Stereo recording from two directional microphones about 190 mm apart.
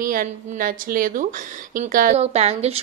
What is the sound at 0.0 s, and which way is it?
A woman's voice, 45° right (ahead or behind).